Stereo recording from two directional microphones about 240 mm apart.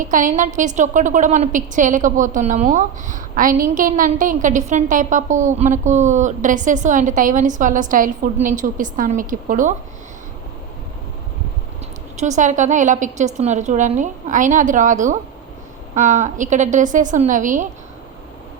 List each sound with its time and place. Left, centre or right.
0.0 s a woman's voice: right
12.1 s a woman's voice: right